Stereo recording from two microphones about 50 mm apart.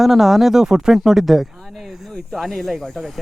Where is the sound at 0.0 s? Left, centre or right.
Centre.